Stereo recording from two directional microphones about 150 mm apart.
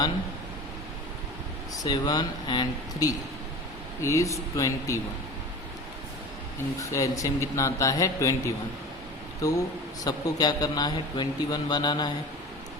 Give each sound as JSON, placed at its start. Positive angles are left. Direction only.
{"t": 1.7, "sound": "a man's voice", "side_deg": 25}
{"t": 6.9, "sound": "a man's voice", "side_deg": 20}
{"t": 9.4, "sound": "a man's voice", "side_deg": 20}